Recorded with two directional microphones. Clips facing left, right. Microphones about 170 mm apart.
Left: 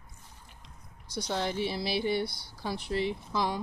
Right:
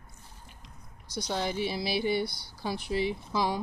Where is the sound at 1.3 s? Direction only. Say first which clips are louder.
Even; 5° right (ahead or behind).